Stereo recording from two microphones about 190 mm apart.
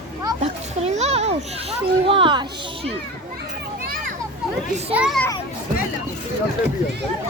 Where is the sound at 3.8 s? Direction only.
50° right (ahead or behind).